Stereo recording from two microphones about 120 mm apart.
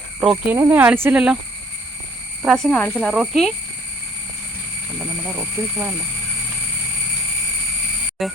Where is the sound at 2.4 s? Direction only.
5° right (ahead or behind).